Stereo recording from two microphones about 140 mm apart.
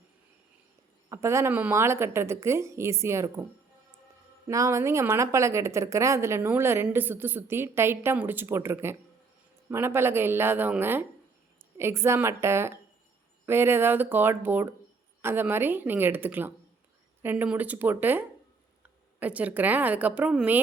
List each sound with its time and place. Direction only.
1.1 s a woman's voice: 20° right (ahead or behind)
4.4 s a woman's voice: 20° right (ahead or behind)